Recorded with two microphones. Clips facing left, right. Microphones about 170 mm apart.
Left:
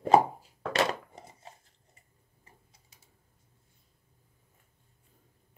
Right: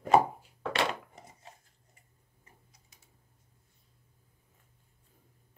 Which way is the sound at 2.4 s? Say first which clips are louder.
Left 1 dB; 30° left (ahead or behind).